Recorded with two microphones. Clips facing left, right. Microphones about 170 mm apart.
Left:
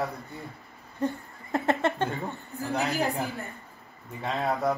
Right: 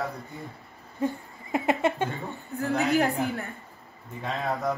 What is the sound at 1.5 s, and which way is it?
Speech, 15° right (ahead or behind).